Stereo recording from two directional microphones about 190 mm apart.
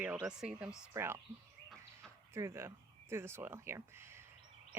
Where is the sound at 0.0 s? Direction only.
5° right (ahead or behind).